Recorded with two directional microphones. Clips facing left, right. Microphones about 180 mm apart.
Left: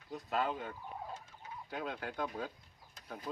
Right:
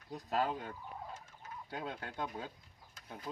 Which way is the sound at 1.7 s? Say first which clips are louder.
Left 2 dB; 30° right (ahead or behind).